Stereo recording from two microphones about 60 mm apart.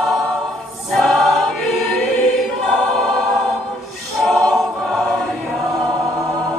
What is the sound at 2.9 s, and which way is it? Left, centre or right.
Choir, centre.